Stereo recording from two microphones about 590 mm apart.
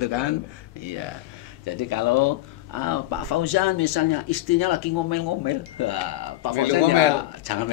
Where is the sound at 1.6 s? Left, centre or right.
Left.